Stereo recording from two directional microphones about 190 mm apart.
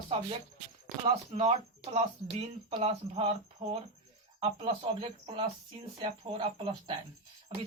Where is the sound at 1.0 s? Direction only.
30° right (ahead or behind).